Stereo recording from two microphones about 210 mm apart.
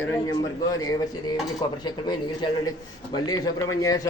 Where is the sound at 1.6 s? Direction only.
20° left (ahead or behind).